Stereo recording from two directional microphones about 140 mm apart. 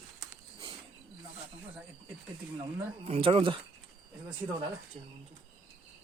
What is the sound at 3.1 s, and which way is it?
Speech, 40° right (ahead or behind).